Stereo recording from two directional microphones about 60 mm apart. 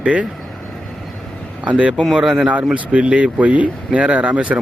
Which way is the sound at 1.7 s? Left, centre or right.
Right.